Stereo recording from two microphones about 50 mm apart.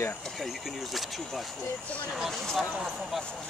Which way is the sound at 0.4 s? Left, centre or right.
Centre.